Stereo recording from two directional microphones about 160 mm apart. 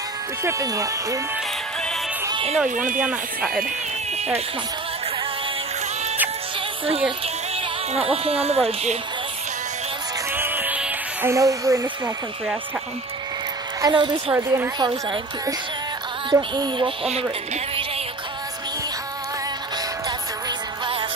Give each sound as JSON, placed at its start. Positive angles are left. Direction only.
{"t": 0.4, "sound": "speech", "side_deg": -20}
{"t": 2.7, "sound": "speech", "side_deg": -55}
{"t": 3.0, "sound": "speech", "side_deg": -10}
{"t": 6.9, "sound": "speech", "side_deg": -35}
{"t": 10.3, "sound": "music", "side_deg": -15}
{"t": 13.7, "sound": "speech", "side_deg": -25}
{"t": 14.3, "sound": "speech", "side_deg": -15}
{"t": 16.3, "sound": "a sound", "side_deg": -30}
{"t": 20.1, "sound": "music", "side_deg": -30}